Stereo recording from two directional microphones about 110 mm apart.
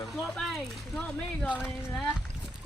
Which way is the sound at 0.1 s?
Centre (ahead or behind).